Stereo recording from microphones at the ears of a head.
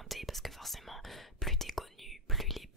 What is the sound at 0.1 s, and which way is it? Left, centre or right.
Whispering, centre.